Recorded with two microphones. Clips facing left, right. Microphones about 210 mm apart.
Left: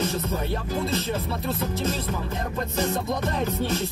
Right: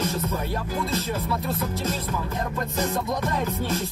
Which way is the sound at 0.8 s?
30° left (ahead or behind).